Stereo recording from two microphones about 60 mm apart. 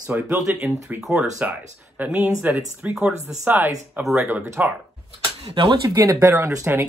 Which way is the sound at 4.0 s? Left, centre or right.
Right.